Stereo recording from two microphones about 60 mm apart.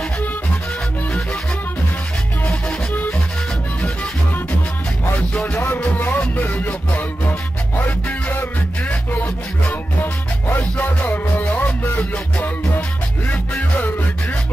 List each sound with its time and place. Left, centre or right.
5.3 s music: centre
8.1 s music: left
10.6 s music: left
13.3 s music: left